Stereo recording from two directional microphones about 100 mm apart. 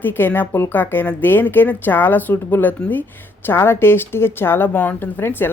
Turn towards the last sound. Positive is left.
turn(degrees=20)  # may be behind; listen again after turning